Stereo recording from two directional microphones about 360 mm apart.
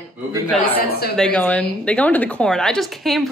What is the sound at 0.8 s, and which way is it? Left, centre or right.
Speech, left.